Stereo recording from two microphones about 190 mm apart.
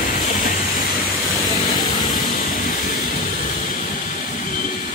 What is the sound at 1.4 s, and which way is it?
Vehicle, 20° left (ahead or behind).